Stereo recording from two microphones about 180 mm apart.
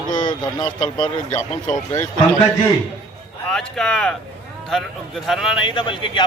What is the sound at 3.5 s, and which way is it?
Speech, 5° left (ahead or behind).